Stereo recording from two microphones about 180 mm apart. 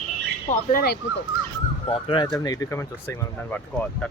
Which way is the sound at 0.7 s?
55° left (ahead or behind).